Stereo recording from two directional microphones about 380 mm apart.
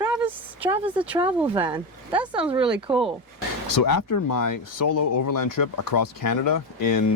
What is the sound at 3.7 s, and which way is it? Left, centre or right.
Speech, left.